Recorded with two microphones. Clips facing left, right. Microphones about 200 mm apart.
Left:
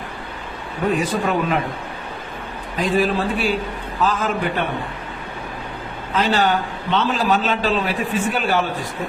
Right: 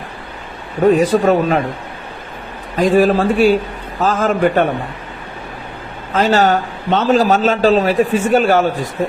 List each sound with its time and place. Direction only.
0.9 s a man's voice: 40° right (ahead or behind)
2.7 s a man's voice: 45° right (ahead or behind)
6.1 s a man's voice: 45° right (ahead or behind)